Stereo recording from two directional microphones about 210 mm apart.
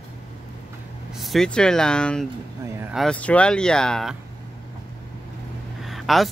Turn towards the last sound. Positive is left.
turn(degrees=0)  # may be behind; listen again after turning